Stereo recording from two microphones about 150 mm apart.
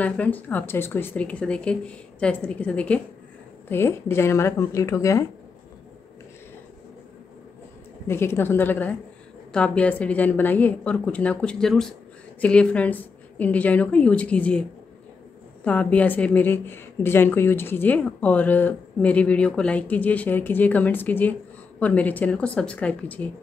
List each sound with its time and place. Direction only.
0.0 s a woman's voice: 10° left (ahead or behind)
8.1 s a woman's voice: 15° left (ahead or behind)